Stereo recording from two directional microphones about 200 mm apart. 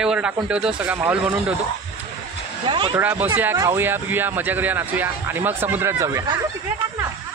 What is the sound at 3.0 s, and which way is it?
Speech, 10° right (ahead or behind).